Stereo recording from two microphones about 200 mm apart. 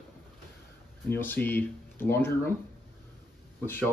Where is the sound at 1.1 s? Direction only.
10° left (ahead or behind).